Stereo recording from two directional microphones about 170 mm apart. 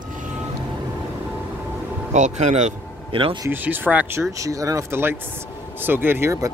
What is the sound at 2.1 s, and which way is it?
A man's voice, 45° right (ahead or behind).